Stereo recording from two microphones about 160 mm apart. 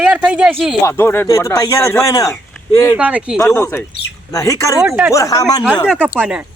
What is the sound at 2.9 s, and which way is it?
Speech, 10° right (ahead or behind).